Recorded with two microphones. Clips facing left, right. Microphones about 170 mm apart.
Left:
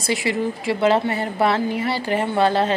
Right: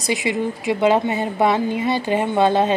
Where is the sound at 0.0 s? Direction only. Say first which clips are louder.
Right 1 dB; 20° right (ahead or behind).